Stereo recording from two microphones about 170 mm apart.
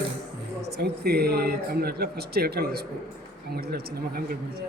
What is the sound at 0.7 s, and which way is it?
Speech, 70° right (ahead or behind).